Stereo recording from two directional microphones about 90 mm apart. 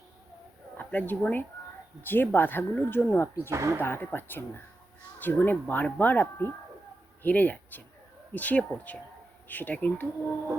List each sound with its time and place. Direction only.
0.8 s speech: 20° left (ahead or behind)
3.5 s speech: 35° right (ahead or behind)
3.8 s speech: 25° left (ahead or behind)